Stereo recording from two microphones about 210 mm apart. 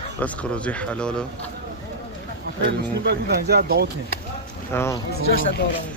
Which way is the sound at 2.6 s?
50° right (ahead or behind).